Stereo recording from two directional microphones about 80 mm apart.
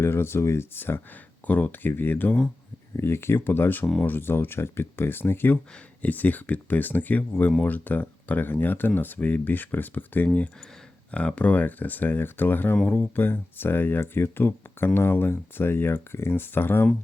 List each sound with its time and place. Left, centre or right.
0.0 s speech: left